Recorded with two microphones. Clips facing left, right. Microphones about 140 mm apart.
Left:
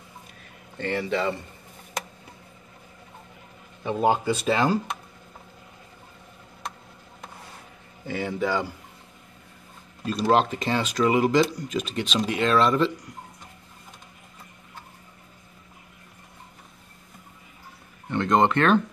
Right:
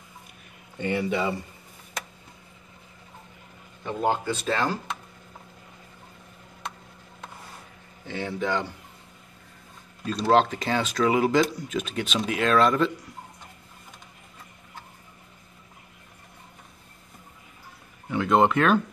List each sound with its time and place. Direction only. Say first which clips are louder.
0.7 s speech: even; 10° right (ahead or behind)
3.8 s speech: left 3 dB; 10° left (ahead or behind)
8.1 s speech: left 2 dB; 5° left (ahead or behind)
10.3 s speech: right 1 dB; centre (ahead or behind)
18.1 s speech: even; 5° right (ahead or behind)